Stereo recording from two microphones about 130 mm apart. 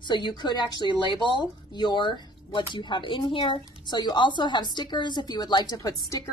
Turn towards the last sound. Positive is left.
turn(degrees=30)  # may be behind; listen again after turning